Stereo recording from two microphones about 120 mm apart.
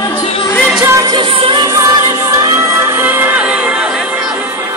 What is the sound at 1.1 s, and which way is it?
Music, 45° right (ahead or behind).